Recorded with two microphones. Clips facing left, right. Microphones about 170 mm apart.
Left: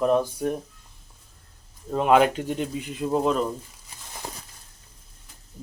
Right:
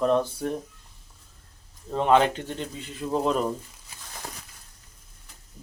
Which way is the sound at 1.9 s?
10° left (ahead or behind).